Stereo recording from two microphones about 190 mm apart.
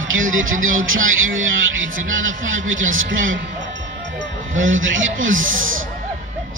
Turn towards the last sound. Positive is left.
turn(degrees=-90)